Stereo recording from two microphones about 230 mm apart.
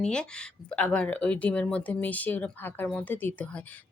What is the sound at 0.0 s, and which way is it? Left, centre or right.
Speech, centre.